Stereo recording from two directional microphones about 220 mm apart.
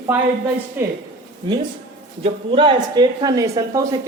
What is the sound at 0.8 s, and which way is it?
Speech, 10° right (ahead or behind).